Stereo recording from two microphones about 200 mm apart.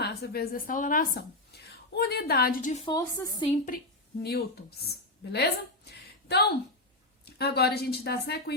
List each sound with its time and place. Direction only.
0.0 s speech: 50° left (ahead or behind)
2.8 s a woman's voice: 15° left (ahead or behind)
3.7 s a woman's voice: 45° left (ahead or behind)